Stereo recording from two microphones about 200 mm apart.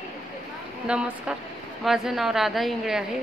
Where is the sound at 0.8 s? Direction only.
5° right (ahead or behind).